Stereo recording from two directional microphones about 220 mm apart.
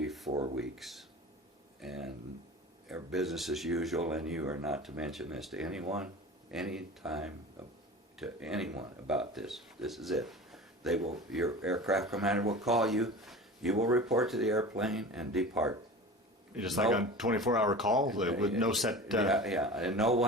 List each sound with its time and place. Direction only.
0.3 s a sound: 20° right (ahead or behind)
0.5 s speech: centre (ahead or behind)
16.7 s speech: centre (ahead or behind)